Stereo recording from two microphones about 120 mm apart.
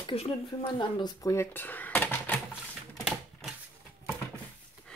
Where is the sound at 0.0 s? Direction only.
55° left (ahead or behind).